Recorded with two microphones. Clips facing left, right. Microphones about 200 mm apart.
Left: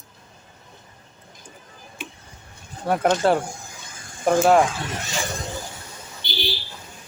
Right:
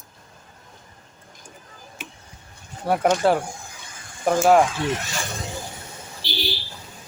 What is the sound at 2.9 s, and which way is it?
Speech, 10° right (ahead or behind).